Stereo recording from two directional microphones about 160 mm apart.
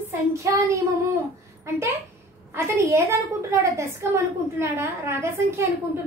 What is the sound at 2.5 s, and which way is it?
A woman's voice, 15° right (ahead or behind).